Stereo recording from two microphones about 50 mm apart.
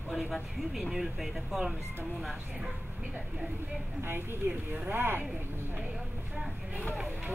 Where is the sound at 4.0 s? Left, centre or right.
Right.